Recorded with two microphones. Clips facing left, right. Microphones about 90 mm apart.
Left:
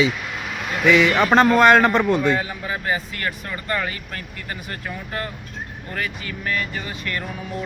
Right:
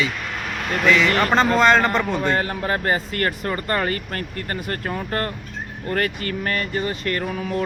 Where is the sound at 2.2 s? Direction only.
60° right (ahead or behind).